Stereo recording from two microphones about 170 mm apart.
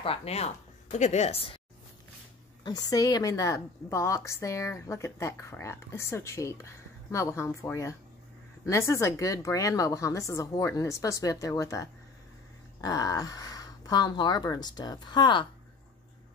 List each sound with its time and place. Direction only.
0.0 s speech: 35° left (ahead or behind)
2.6 s a woman's voice: 25° left (ahead or behind)